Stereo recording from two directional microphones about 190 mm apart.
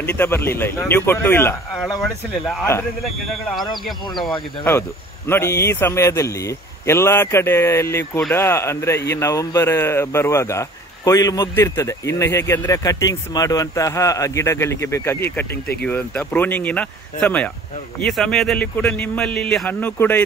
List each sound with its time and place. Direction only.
0.0 s speech: 10° left (ahead or behind)
2.0 s a man's voice: centre (ahead or behind)
5.3 s a man's voice: 15° left (ahead or behind)